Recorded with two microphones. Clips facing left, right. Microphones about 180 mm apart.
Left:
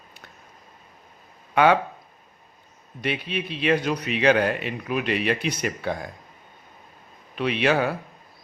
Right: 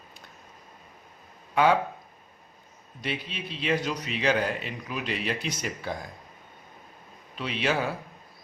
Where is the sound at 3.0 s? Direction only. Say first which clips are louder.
Left 6 dB; 65° left (ahead or behind).